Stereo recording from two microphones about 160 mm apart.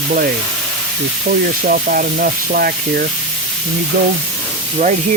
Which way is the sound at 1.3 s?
60° right (ahead or behind).